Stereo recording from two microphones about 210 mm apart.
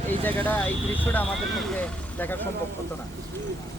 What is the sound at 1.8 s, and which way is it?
Speech, 10° left (ahead or behind).